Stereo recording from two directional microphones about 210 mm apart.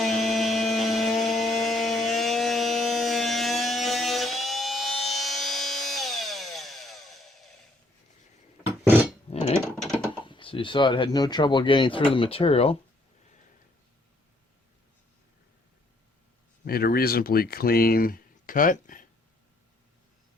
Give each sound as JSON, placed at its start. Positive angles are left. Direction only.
{"t": 0.0, "sound": "chainsaw", "side_deg": 0}
{"t": 9.3, "sound": "a sound", "side_deg": 30}
{"t": 9.7, "sound": "typing", "side_deg": 0}
{"t": 10.2, "sound": "speech", "side_deg": 25}
{"t": 16.6, "sound": "speech", "side_deg": 45}